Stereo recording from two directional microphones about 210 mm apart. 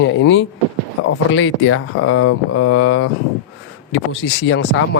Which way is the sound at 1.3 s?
75° left (ahead or behind).